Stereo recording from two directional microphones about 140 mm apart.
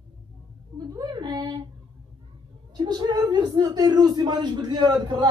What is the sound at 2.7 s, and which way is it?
Speech, 30° right (ahead or behind).